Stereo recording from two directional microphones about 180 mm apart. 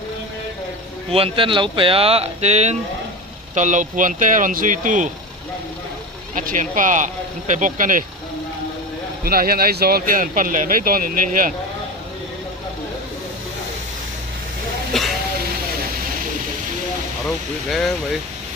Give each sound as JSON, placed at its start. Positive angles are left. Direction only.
{"t": 1.1, "sound": "speech", "side_deg": -30}
{"t": 6.3, "sound": "speech", "side_deg": -45}
{"t": 9.2, "sound": "speech", "side_deg": -55}
{"t": 14.9, "sound": "speech", "side_deg": 0}
{"t": 17.6, "sound": "speech", "side_deg": 0}